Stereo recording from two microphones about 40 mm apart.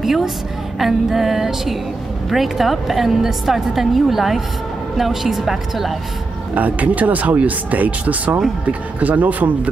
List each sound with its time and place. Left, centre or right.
0.0 s a woman's voice: centre
6.5 s speech: right